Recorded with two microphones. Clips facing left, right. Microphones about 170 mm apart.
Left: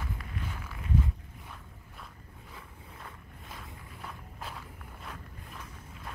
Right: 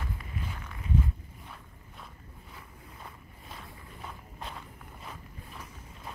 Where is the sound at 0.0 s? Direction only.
Centre (ahead or behind).